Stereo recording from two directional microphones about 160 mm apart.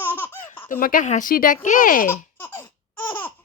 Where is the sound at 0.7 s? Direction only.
60° left (ahead or behind).